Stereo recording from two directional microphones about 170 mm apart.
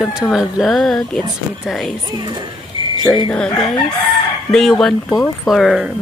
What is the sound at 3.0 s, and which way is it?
Speech, 20° left (ahead or behind).